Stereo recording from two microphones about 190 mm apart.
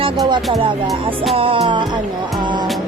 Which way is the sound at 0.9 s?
Centre (ahead or behind).